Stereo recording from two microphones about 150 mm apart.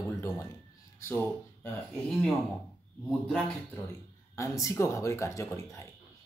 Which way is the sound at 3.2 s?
5° left (ahead or behind).